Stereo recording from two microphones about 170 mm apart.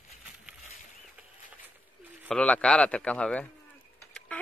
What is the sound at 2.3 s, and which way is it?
A man's voice, 5° left (ahead or behind).